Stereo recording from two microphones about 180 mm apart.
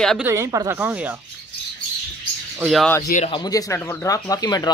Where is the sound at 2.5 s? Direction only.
Centre (ahead or behind).